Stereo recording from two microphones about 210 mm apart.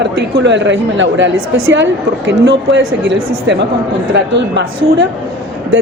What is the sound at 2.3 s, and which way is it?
A woman's voice, 55° right (ahead or behind).